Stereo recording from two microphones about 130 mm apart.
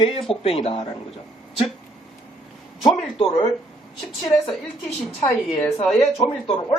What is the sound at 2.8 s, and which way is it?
Speech, 45° left (ahead or behind).